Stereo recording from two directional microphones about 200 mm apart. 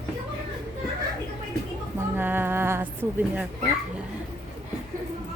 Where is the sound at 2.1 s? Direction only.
10° right (ahead or behind).